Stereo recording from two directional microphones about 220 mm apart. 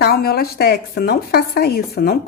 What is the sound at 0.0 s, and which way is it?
A woman's voice, 45° left (ahead or behind).